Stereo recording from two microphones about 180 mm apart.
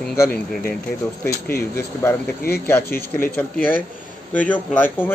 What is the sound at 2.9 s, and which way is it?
Speech, 55° left (ahead or behind).